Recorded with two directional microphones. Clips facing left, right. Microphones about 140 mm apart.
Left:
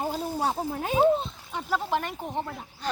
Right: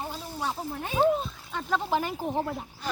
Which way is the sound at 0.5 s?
50° left (ahead or behind).